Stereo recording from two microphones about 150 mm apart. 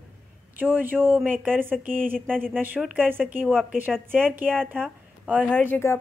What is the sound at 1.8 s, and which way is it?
Speech, 65° right (ahead or behind).